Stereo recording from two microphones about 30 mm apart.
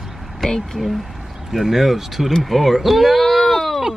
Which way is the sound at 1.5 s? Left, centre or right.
Centre.